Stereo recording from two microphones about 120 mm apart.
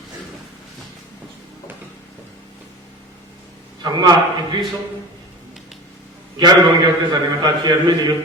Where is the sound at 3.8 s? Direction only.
35° right (ahead or behind).